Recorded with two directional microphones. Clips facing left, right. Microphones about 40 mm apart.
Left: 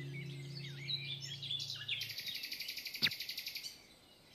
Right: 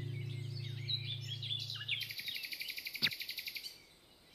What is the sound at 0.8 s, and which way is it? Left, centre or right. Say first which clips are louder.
Bird: right 1 dB; right.